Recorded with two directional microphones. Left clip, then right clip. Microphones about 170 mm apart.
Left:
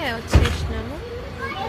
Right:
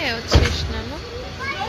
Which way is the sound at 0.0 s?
20° left (ahead or behind).